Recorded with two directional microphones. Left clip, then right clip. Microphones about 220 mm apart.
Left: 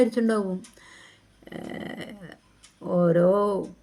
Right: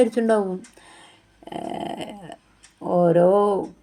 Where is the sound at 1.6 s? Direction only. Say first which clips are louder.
Right 7 dB; 55° right (ahead or behind).